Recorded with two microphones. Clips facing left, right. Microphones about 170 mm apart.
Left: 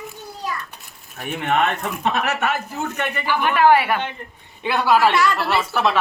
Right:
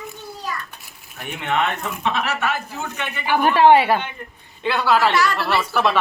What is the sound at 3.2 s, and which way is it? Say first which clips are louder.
Speech: right 4 dB; 50° right (ahead or behind).